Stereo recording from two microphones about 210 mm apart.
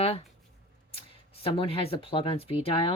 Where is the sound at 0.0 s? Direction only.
30° left (ahead or behind).